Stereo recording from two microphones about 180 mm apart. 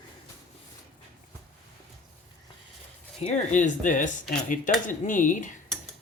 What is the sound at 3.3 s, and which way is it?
Speech, 45° left (ahead or behind).